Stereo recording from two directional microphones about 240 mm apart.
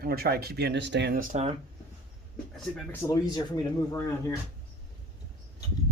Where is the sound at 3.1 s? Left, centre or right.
Centre.